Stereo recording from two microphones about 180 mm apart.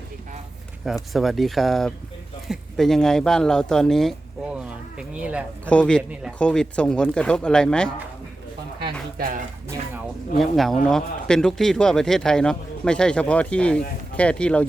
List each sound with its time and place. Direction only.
0.9 s speech: centre (ahead or behind)
5.6 s speech: 5° left (ahead or behind)
6.0 s speech: 5° right (ahead or behind)
6.4 s speech: 5° left (ahead or behind)
8.8 s a sound: 55° right (ahead or behind)
10.3 s speech: centre (ahead or behind)